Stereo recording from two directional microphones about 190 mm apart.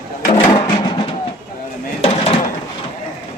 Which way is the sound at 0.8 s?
25° left (ahead or behind).